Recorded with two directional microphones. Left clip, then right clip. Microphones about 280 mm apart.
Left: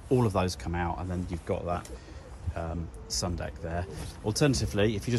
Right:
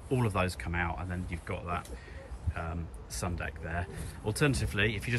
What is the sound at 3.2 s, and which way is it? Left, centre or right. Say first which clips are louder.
Speech: right 2 dB; centre.